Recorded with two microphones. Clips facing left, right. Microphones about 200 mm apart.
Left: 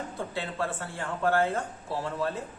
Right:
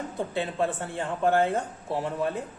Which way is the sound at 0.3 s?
20° right (ahead or behind).